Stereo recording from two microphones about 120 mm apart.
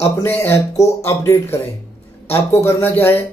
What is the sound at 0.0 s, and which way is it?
A man's voice, 20° left (ahead or behind).